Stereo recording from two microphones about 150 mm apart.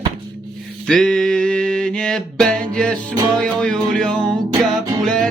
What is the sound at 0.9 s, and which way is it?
Music, 5° left (ahead or behind).